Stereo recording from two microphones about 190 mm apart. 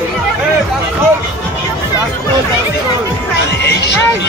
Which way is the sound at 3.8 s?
65° left (ahead or behind).